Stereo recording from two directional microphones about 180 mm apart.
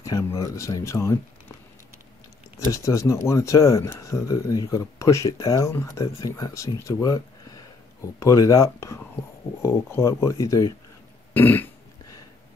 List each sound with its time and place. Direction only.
0.0 s speech: 20° left (ahead or behind)
2.7 s speech: 15° left (ahead or behind)
11.3 s burping: 10° left (ahead or behind)